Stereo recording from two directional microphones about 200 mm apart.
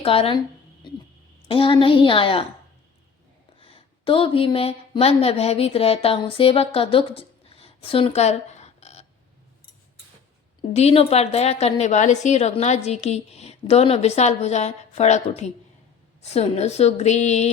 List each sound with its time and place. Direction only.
0.0 s a woman's voice: 30° left (ahead or behind)
1.5 s a woman's voice: 25° left (ahead or behind)
3.6 s a woman's voice: 25° left (ahead or behind)
10.8 s a woman's voice: 30° left (ahead or behind)